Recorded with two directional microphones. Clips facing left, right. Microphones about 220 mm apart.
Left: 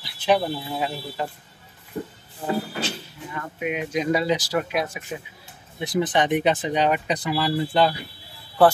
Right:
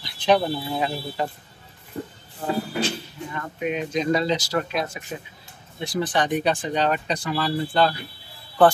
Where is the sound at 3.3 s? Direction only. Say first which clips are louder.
Right 1 dB; 10° left (ahead or behind).